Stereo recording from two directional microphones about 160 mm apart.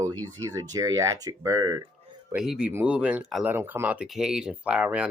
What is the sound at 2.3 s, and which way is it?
Speech, 5° right (ahead or behind).